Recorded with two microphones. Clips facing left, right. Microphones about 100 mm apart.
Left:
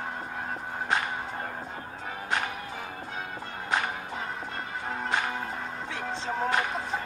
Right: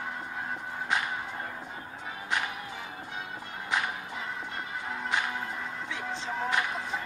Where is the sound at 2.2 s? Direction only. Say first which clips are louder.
Left 2 dB; 40° left (ahead or behind).